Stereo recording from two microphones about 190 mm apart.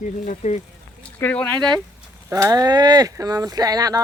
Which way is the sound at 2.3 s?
15° right (ahead or behind).